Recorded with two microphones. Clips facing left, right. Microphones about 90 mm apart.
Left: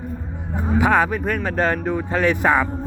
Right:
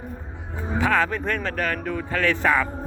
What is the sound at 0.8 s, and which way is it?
Speech, 15° left (ahead or behind).